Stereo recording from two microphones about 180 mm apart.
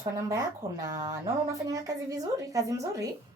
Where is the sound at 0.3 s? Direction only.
15° right (ahead or behind).